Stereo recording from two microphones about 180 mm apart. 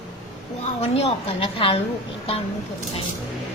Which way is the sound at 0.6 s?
35° left (ahead or behind).